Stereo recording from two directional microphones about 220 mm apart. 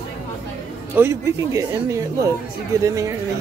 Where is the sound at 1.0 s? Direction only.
15° right (ahead or behind).